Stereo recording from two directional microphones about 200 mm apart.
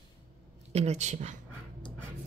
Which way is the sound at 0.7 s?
30° right (ahead or behind).